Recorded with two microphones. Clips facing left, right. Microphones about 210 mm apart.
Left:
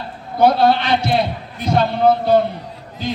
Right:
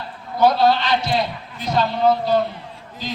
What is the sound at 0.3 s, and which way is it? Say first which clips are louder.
A man's voice: left 2 dB; 55° left (ahead or behind).